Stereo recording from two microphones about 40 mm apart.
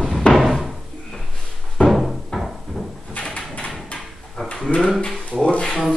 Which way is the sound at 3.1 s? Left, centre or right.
Left.